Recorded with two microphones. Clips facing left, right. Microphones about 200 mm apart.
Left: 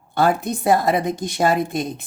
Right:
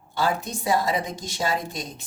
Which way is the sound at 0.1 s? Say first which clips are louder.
Left 7 dB; 55° left (ahead or behind).